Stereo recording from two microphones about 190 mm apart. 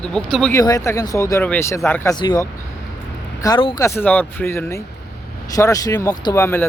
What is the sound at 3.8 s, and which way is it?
Speech, 10° left (ahead or behind).